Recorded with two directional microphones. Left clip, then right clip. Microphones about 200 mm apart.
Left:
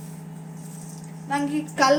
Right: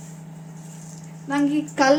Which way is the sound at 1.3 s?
35° right (ahead or behind).